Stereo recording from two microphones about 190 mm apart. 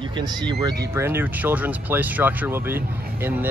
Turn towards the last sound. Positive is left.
turn(degrees=-10)  # may be behind; listen again after turning